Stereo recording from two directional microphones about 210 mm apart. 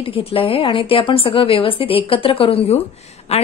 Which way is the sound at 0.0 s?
25° left (ahead or behind).